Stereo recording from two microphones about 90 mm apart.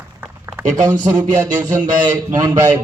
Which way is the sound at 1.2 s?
50° right (ahead or behind).